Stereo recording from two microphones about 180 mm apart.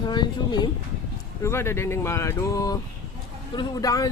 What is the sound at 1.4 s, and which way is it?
Speech, 15° left (ahead or behind).